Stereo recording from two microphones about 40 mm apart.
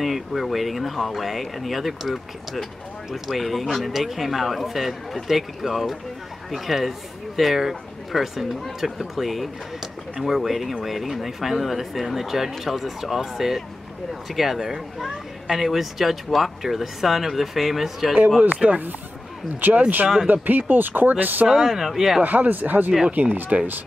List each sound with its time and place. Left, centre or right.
0.0 s speech: centre
18.4 s speech: right
19.6 s speech: right
21.5 s speech: centre
22.2 s speech: right